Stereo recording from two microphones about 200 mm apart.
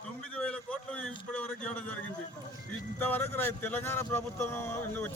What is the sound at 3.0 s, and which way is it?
Speech, 10° left (ahead or behind).